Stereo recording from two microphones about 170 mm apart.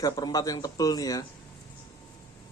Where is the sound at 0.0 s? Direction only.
20° left (ahead or behind).